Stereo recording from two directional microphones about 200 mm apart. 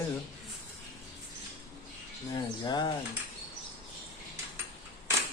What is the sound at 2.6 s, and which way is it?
Mechanisms, 20° left (ahead or behind).